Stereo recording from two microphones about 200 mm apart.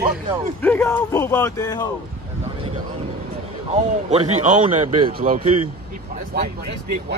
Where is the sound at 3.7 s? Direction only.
35° right (ahead or behind).